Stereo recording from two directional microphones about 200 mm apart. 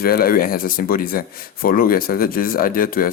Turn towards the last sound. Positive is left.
turn(degrees=45)  # may be behind; listen again after turning